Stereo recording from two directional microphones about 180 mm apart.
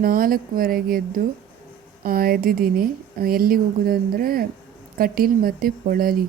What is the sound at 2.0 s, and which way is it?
A woman's voice, 55° right (ahead or behind).